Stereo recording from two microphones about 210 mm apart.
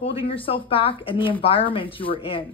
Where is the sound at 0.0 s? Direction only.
25° left (ahead or behind).